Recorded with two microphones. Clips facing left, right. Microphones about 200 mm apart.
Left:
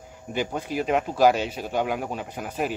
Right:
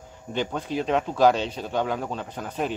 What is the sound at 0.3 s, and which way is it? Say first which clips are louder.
Speech: even; 10° left (ahead or behind).